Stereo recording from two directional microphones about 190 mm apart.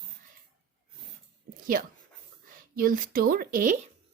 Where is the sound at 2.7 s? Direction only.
50° right (ahead or behind).